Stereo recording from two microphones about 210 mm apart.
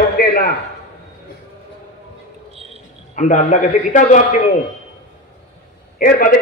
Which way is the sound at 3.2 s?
35° left (ahead or behind).